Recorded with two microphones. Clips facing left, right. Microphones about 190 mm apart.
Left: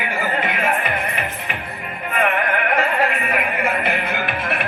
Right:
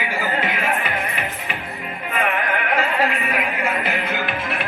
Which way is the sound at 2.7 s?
55° left (ahead or behind).